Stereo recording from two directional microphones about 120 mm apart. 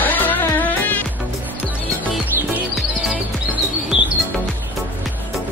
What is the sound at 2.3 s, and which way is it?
Music, 20° right (ahead or behind).